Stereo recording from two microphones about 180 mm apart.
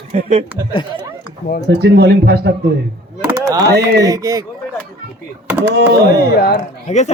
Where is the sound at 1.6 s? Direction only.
65° right (ahead or behind).